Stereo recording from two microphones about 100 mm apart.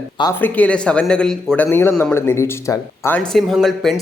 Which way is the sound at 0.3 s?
15° left (ahead or behind).